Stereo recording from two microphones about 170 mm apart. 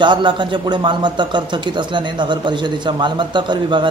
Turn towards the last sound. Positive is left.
turn(degrees=-25)  # may be behind; listen again after turning